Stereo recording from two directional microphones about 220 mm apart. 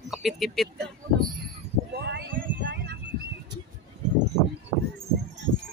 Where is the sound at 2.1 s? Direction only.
50° right (ahead or behind).